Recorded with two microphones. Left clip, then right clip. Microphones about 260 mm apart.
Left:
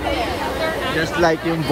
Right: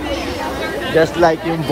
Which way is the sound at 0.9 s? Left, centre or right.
Centre.